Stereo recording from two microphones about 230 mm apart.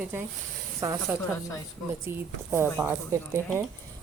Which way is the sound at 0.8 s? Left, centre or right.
Centre.